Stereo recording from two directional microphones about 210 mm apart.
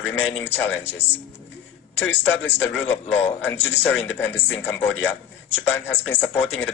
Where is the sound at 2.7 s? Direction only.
5° left (ahead or behind).